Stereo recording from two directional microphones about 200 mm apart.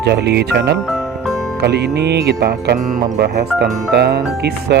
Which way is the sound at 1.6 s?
55° right (ahead or behind).